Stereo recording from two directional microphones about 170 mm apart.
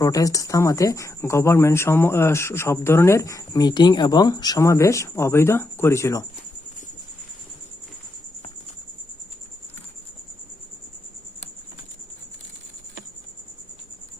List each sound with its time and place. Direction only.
0.0 s speech: 20° left (ahead or behind)